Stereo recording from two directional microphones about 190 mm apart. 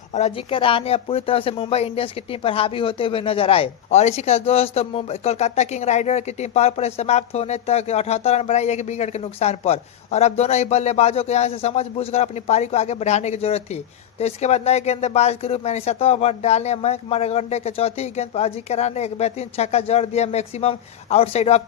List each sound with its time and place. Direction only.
0.1 s speech: 35° left (ahead or behind)